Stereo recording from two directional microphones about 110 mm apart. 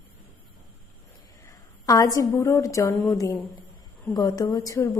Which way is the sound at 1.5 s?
30° left (ahead or behind).